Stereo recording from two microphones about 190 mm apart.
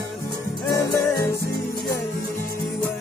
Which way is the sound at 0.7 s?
15° left (ahead or behind).